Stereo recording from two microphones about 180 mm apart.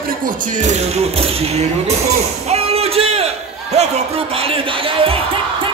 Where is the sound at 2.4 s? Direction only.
35° right (ahead or behind).